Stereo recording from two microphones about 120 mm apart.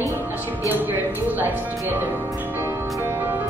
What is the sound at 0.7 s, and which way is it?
Speech, 15° right (ahead or behind).